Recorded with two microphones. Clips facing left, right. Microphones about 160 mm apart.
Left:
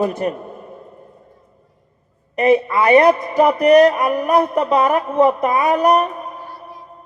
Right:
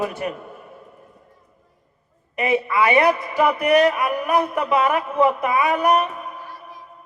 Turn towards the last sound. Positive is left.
turn(degrees=40)  # may be behind; listen again after turning